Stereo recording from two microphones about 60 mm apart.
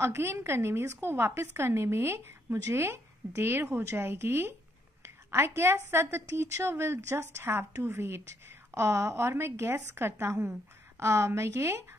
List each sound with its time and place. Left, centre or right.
0.0 s a woman's voice: right
5.0 s a sound: right
5.9 s a woman's voice: right
7.8 s a woman's voice: right